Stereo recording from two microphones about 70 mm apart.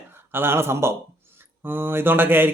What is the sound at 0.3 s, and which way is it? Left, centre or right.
A man's voice, right.